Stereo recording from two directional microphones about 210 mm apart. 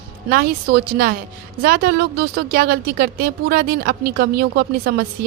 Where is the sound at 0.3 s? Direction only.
45° right (ahead or behind).